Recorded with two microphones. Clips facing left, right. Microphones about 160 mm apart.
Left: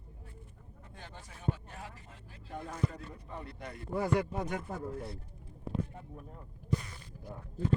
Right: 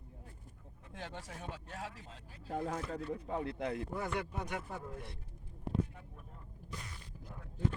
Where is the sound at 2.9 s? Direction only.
75° right (ahead or behind).